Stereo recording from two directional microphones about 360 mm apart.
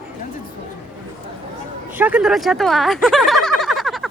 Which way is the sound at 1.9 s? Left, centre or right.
Centre.